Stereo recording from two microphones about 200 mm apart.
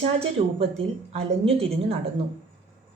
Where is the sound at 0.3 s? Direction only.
30° right (ahead or behind).